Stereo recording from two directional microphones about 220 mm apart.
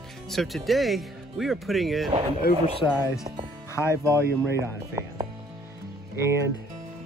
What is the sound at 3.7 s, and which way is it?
Speech, 10° left (ahead or behind).